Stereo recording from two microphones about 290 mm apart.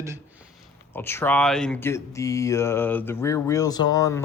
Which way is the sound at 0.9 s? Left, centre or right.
Centre.